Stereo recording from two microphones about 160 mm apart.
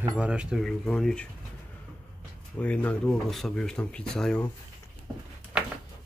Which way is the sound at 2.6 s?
10° left (ahead or behind).